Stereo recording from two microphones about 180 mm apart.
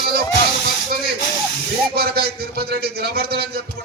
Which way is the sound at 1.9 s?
60° right (ahead or behind).